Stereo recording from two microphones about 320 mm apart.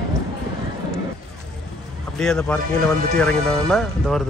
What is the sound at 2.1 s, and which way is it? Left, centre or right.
Speech, centre.